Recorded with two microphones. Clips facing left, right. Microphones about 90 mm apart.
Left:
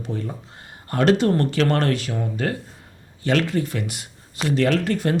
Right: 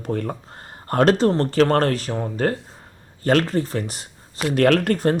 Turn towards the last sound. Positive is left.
turn(degrees=-55)  # may be behind; listen again after turning